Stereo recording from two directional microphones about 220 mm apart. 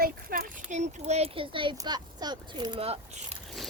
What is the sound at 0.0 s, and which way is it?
A child's voice, 40° right (ahead or behind).